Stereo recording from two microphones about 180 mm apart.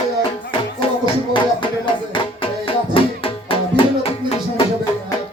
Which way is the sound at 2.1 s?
30° left (ahead or behind).